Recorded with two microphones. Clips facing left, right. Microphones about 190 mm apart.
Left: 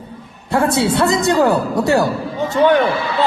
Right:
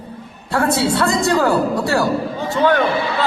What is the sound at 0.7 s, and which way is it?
A man's voice, 20° left (ahead or behind).